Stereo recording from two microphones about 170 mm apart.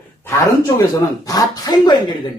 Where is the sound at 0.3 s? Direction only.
20° left (ahead or behind).